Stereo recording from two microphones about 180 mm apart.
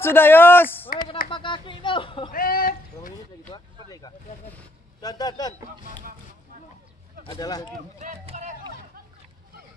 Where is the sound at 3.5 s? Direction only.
25° left (ahead or behind).